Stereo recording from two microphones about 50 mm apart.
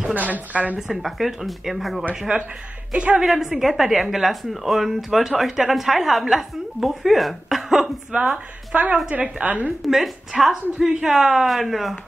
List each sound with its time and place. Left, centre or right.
0.1 s a woman's voice: right
0.7 s speech: centre
2.3 s a woman's voice: right
3.3 s speech: centre
8.1 s a woman's voice: right
9.8 s a woman's voice: centre